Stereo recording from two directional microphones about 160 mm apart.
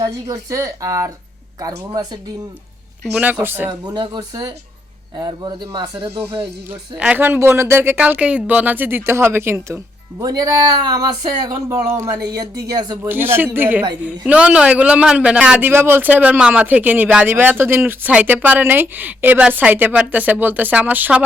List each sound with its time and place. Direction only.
0.0 s speech: 20° right (ahead or behind)
3.2 s a man's voice: 10° right (ahead or behind)
3.7 s speech: 25° right (ahead or behind)
6.9 s a man's voice: 10° right (ahead or behind); by 13.0 s 25° right (ahead or behind)
13.1 s a man's voice: 15° right (ahead or behind)